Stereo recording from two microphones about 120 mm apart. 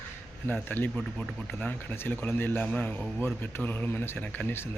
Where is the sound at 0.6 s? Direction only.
15° left (ahead or behind).